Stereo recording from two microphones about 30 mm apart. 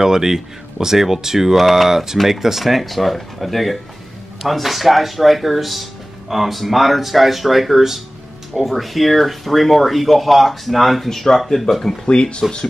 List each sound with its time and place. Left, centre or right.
0.0 s speech: centre
11.1 s speech: centre
12.1 s speech: left